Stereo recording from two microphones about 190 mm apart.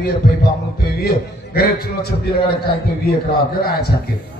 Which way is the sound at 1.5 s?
55° left (ahead or behind).